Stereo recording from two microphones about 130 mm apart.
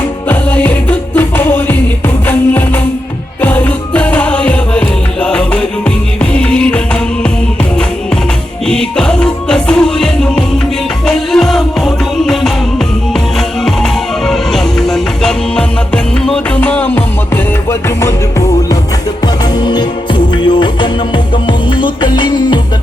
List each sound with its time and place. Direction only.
0.3 s music: 10° left (ahead or behind)
8.6 s music: 5° left (ahead or behind)
13.7 s music: 5° left (ahead or behind); by 18.8 s 20° left (ahead or behind)
19.5 s music: 35° left (ahead or behind)